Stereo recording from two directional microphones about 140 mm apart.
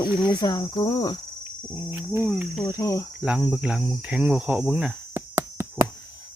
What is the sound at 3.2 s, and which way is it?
Cricket, 5° right (ahead or behind).